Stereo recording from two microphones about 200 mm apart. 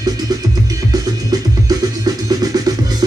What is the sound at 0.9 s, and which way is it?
Music, 20° right (ahead or behind).